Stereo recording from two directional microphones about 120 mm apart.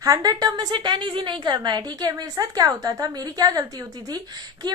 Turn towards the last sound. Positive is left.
turn(degrees=-35)  # may be behind; listen again after turning